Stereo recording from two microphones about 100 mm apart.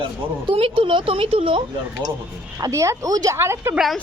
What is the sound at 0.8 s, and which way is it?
Speech, 60° right (ahead or behind).